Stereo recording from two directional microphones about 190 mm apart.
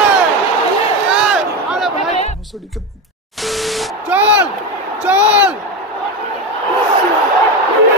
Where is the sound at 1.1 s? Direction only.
5° right (ahead or behind).